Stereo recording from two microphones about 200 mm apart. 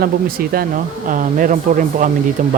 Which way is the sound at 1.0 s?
40° right (ahead or behind).